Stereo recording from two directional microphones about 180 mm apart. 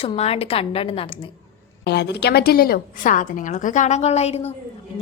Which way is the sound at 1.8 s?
70° left (ahead or behind).